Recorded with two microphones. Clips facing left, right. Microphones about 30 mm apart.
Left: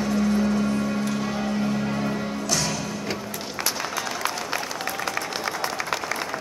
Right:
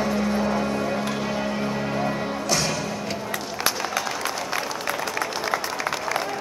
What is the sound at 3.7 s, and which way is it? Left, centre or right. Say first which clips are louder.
Music: right 2 dB; centre.